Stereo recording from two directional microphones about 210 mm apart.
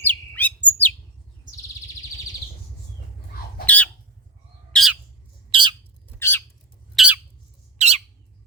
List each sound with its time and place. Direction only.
0.0 s bird: 10° left (ahead or behind)
4.7 s bird: centre (ahead or behind)
5.5 s bird: 25° right (ahead or behind)
6.1 s squawk: 10° left (ahead or behind)
6.9 s bird: 5° right (ahead or behind)
7.8 s bird: 30° right (ahead or behind)